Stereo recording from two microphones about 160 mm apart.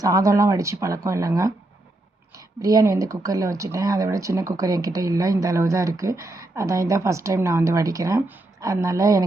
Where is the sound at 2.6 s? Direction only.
20° right (ahead or behind).